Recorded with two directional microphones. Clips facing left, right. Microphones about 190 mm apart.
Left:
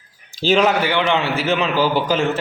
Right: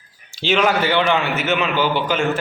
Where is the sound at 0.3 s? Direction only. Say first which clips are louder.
Left 3 dB; 40° left (ahead or behind).